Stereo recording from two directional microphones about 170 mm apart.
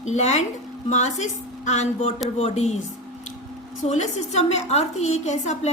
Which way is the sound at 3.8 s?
45° left (ahead or behind).